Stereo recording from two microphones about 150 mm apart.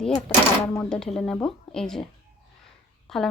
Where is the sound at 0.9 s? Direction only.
5° left (ahead or behind).